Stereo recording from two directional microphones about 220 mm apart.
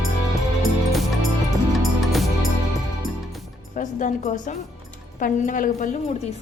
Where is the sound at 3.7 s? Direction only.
35° left (ahead or behind).